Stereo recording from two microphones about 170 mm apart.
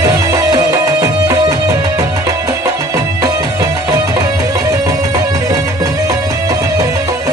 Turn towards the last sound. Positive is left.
turn(degrees=-20)  # may be behind; listen again after turning